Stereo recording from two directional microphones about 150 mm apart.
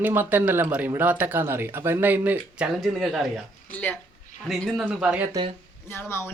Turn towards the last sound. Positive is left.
turn(degrees=15)  # may be behind; listen again after turning